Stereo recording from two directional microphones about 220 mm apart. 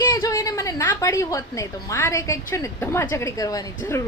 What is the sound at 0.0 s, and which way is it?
A woman's voice, 15° left (ahead or behind).